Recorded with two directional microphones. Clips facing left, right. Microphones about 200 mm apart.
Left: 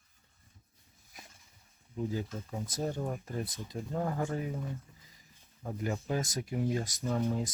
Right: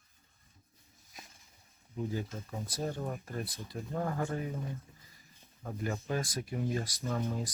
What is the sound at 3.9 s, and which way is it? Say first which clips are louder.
Speech: left 1 dB; 10° left (ahead or behind).